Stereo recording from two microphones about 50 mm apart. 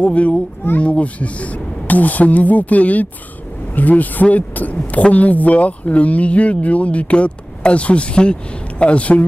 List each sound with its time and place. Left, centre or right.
0.0 s speech: left